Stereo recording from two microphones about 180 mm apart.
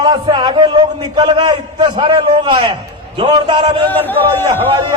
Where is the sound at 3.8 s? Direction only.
10° left (ahead or behind).